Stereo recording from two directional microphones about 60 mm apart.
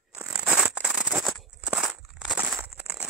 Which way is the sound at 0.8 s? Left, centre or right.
Centre.